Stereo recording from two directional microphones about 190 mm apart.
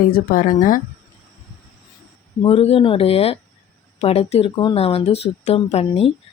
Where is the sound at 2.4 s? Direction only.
30° left (ahead or behind).